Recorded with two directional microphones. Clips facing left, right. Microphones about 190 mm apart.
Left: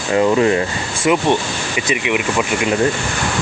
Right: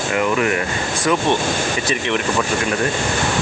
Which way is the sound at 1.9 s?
10° left (ahead or behind).